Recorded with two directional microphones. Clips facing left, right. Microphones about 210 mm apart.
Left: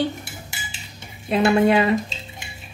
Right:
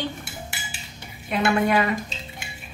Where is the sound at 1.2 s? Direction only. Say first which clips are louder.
Left 5 dB; 30° left (ahead or behind).